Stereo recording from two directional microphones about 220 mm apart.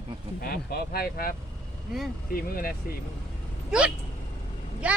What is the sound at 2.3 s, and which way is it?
Speech, 40° left (ahead or behind).